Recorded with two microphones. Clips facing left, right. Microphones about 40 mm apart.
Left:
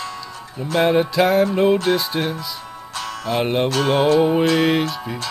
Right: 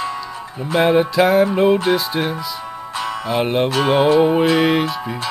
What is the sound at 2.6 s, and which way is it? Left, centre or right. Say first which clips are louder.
Music: right 5 dB; centre.